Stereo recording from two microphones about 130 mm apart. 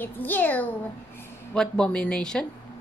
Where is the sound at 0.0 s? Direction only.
15° left (ahead or behind).